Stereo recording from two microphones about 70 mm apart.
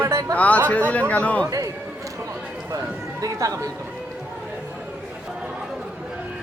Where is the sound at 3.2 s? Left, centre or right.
Right.